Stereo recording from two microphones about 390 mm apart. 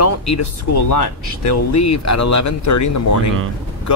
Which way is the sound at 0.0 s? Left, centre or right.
Left.